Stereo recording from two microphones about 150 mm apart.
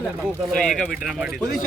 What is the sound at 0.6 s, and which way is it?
Speech, 5° left (ahead or behind).